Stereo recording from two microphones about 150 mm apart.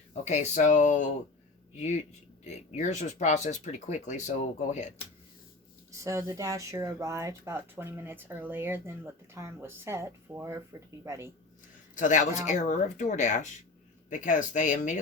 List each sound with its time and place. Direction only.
0.1 s speech: 50° left (ahead or behind)
5.9 s speech: 20° right (ahead or behind)
11.9 s speech: 55° left (ahead or behind)